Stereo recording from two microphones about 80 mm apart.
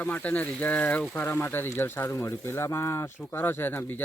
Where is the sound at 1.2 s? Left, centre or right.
Left.